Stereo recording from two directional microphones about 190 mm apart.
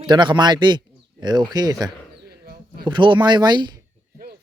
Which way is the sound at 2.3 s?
55° right (ahead or behind).